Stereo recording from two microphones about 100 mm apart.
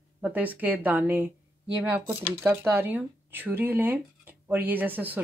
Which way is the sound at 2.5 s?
25° right (ahead or behind).